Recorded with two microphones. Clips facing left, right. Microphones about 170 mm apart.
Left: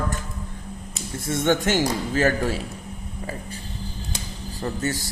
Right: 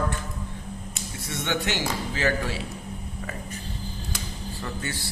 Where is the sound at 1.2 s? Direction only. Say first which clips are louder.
Left 7 dB; 45° left (ahead or behind).